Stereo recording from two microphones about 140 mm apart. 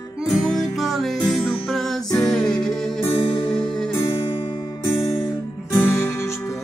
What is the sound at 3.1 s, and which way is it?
Music, 35° left (ahead or behind).